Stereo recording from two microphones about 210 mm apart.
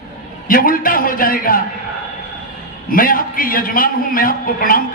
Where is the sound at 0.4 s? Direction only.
40° left (ahead or behind).